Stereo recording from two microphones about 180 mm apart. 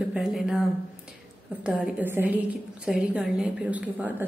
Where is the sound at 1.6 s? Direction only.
5° right (ahead or behind).